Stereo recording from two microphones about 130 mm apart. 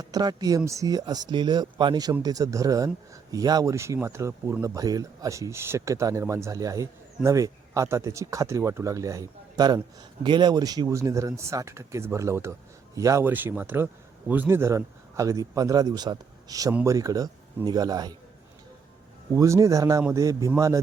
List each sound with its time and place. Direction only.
0.0 s speech: 30° right (ahead or behind)
13.2 s speech: 15° right (ahead or behind); by 18.2 s 30° right (ahead or behind)
19.3 s speech: 25° right (ahead or behind)